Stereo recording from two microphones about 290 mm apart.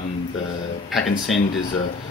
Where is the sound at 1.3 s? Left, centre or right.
Centre.